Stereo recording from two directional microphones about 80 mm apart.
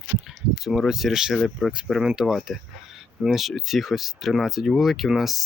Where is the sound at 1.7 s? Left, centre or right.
Centre.